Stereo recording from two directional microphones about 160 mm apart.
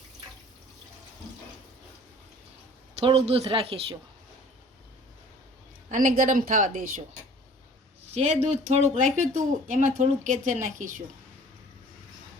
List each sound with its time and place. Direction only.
3.0 s speech: 35° right (ahead or behind)
5.9 s a woman's voice: 55° right (ahead or behind)
8.1 s speech: 45° right (ahead or behind)